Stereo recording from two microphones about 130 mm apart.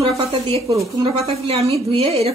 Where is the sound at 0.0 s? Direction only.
45° right (ahead or behind).